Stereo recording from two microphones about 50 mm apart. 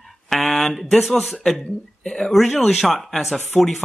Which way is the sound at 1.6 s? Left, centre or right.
Centre.